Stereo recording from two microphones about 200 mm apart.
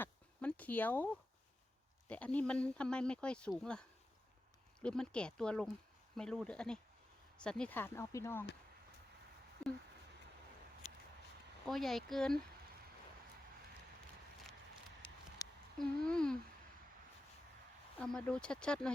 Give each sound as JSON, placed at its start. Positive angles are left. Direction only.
{"t": 0.0, "sound": "a sound", "side_deg": 5}
{"t": 2.0, "sound": "speech", "side_deg": 5}
{"t": 11.6, "sound": "speech", "side_deg": 0}
{"t": 15.4, "sound": "a sound", "side_deg": 20}
{"t": 15.8, "sound": "speech", "side_deg": 5}
{"t": 17.9, "sound": "speech", "side_deg": 5}